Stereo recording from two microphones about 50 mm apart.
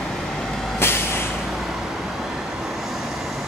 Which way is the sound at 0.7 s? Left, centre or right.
Left.